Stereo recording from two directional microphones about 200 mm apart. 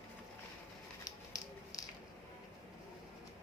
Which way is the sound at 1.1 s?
15° left (ahead or behind).